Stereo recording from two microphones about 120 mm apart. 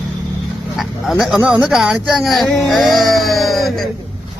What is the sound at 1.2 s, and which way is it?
Speech, 5° right (ahead or behind).